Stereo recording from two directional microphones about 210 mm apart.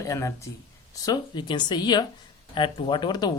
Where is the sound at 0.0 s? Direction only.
15° left (ahead or behind).